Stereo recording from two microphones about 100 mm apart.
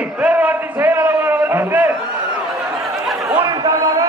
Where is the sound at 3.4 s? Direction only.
40° right (ahead or behind).